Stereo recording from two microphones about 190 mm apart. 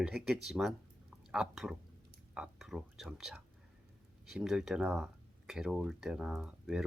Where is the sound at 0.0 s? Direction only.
5° right (ahead or behind).